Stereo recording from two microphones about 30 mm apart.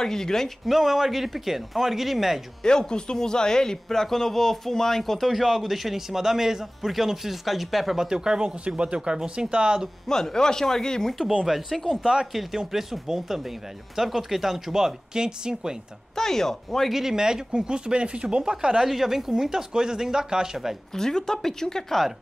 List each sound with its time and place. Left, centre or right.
0.0 s speech: centre
0.7 s speech: centre
2.6 s speech: left; by 8.1 s centre
8.1 s speech: right
10.0 s speech: centre
11.4 s speech: centre
12.0 s speech: right
12.7 s speech: centre; by 15.8 s right
16.2 s speech: centre
16.9 s speech: centre; by 18.5 s right
18.5 s speech: right
18.9 s speech: centre
20.9 s speech: centre